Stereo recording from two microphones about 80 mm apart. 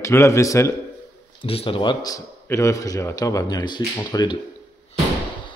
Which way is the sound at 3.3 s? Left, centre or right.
Left.